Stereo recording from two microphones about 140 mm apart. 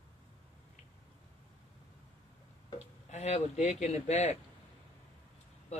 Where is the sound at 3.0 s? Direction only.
55° left (ahead or behind).